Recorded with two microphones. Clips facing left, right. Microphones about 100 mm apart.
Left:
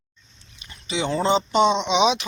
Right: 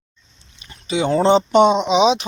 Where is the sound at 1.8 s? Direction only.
35° right (ahead or behind).